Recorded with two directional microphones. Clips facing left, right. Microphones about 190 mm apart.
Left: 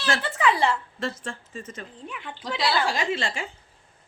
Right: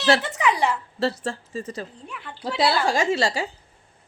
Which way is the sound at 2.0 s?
5° left (ahead or behind).